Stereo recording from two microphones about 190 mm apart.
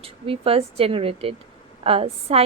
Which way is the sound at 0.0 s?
30° right (ahead or behind).